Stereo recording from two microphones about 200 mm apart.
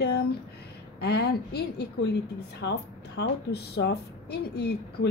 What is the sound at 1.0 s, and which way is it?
A woman's voice, 55° left (ahead or behind).